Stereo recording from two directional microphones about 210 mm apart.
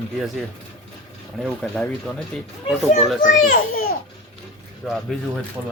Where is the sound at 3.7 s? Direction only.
45° left (ahead or behind).